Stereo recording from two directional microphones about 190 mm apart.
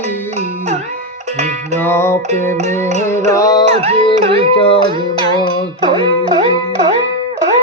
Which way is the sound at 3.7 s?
30° right (ahead or behind).